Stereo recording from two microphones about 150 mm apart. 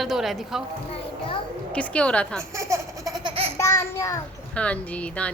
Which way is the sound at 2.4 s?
20° right (ahead or behind).